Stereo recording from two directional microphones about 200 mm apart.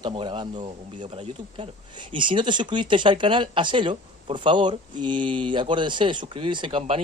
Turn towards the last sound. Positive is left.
turn(degrees=-25)  # may be behind; listen again after turning